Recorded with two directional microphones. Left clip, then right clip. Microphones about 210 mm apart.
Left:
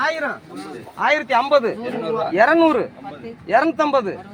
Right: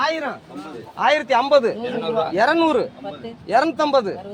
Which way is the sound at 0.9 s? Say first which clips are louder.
Even; centre (ahead or behind).